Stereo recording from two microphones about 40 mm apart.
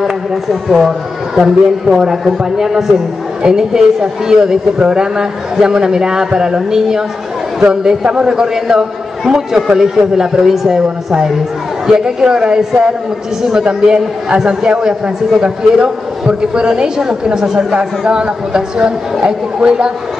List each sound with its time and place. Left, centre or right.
0.0 s a man's voice: centre; by 19.9 s right